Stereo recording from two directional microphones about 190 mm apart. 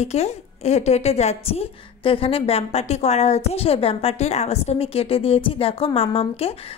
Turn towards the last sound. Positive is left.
turn(degrees=30)  # may be behind; listen again after turning